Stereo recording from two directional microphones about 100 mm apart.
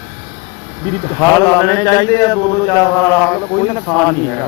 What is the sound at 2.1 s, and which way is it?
Speech, 35° left (ahead or behind).